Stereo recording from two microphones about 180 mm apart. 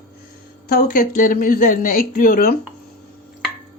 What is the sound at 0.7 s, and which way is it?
Speech, 50° left (ahead or behind).